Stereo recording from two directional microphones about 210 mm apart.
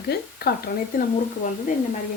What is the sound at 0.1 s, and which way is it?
Speech, 45° left (ahead or behind).